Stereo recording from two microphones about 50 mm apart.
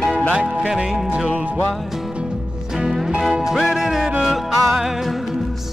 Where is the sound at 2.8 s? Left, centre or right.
Centre.